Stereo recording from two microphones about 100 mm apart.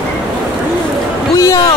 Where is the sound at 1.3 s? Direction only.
35° left (ahead or behind).